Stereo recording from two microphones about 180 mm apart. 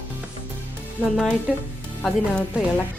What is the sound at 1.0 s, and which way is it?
Speech, 10° left (ahead or behind).